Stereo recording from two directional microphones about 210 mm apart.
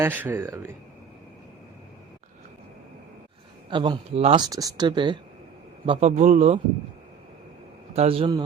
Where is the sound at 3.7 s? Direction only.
25° right (ahead or behind).